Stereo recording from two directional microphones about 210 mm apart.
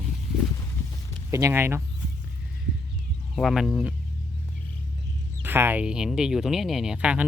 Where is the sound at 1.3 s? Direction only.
10° right (ahead or behind).